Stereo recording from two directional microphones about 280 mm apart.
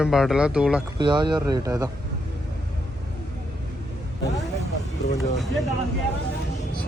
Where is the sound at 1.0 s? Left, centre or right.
Centre.